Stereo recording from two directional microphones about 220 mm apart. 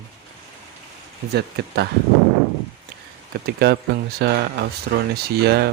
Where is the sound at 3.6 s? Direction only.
45° right (ahead or behind).